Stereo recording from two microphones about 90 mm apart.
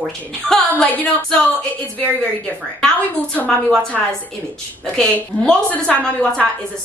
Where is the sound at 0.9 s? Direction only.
15° left (ahead or behind).